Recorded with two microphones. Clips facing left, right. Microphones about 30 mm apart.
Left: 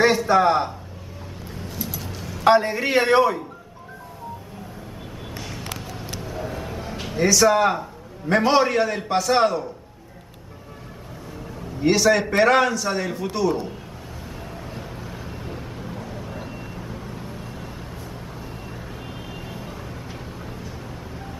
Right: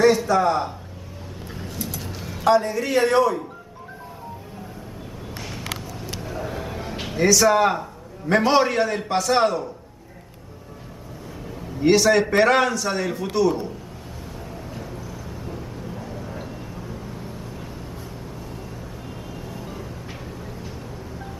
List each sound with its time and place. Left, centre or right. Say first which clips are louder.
0.3 s a man's voice: left 2 dB; left
1.8 s vehicle: even; centre
2.4 s a man's voice: left 2 dB; left
5.3 s a sound: right 2 dB; centre
7.2 s a man's voice: even; centre
11.8 s a man's voice: right 1 dB; centre
14.7 s vehicle: even; left
16.1 s a sound: even; left